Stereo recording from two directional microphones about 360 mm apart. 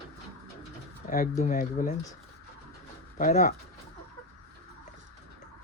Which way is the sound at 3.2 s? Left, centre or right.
Left.